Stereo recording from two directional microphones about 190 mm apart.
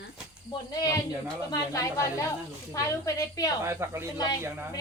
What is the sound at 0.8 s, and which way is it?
A woman's voice, 20° left (ahead or behind).